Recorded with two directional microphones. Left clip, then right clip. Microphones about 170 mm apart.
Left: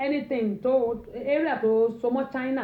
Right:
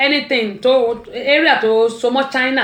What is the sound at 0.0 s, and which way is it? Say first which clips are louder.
Speech: right 12 dB; 30° right (ahead or behind).